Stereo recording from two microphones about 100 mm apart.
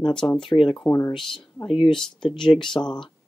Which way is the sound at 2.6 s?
5° left (ahead or behind).